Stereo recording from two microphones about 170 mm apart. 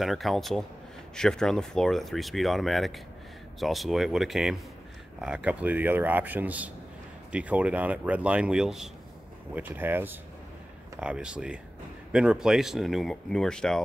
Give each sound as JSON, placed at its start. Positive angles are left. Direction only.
{"t": 0.0, "sound": "a man's voice", "side_deg": 0}